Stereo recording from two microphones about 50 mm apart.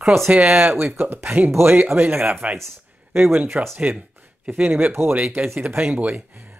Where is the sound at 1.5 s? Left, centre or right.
Right.